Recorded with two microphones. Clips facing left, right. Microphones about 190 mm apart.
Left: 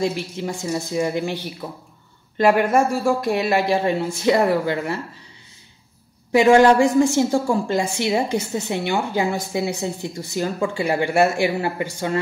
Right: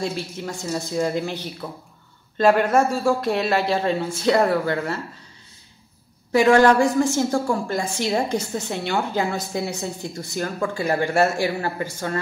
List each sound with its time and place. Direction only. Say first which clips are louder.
0.0 s speech: left 4 dB; 15° left (ahead or behind)
6.3 s speech: left 2 dB; 15° left (ahead or behind)